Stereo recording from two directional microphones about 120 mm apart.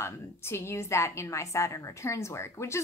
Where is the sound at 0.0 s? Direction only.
20° left (ahead or behind).